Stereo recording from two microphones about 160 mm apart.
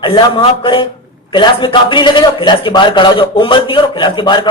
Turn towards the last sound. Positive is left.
turn(degrees=30)  # may be behind; listen again after turning